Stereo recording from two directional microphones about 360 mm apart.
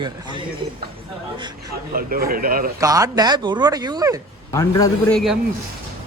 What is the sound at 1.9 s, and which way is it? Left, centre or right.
Speech, right.